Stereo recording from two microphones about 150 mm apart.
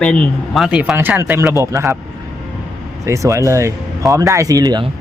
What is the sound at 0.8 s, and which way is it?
Speech, 10° right (ahead or behind).